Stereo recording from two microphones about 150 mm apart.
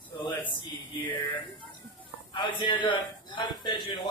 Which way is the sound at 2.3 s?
35° left (ahead or behind).